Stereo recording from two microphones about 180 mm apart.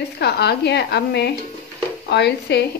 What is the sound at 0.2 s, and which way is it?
Speech, 65° left (ahead or behind).